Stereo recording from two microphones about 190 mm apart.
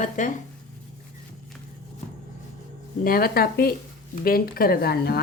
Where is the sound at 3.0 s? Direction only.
50° left (ahead or behind).